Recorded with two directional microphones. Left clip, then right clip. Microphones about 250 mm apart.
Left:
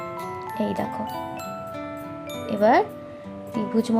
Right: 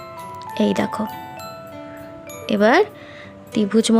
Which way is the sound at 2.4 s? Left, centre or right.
Right.